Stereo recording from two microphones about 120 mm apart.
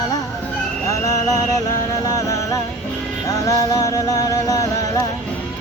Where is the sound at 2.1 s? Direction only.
25° left (ahead or behind).